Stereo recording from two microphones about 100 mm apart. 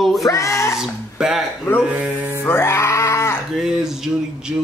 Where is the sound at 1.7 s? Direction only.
25° left (ahead or behind).